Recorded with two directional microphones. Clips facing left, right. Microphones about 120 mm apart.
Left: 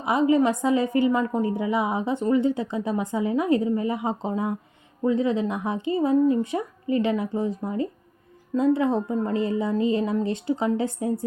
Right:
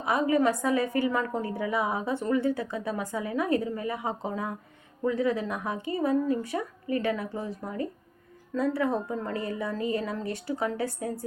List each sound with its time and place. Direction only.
0.0 s a woman's voice: 20° left (ahead or behind)